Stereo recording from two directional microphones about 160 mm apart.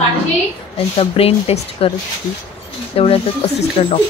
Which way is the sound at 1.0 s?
40° left (ahead or behind).